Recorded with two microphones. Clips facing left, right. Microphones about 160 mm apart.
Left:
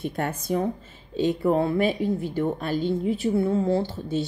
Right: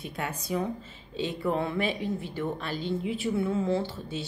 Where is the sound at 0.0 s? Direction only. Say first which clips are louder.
Left 7 dB; 50° left (ahead or behind).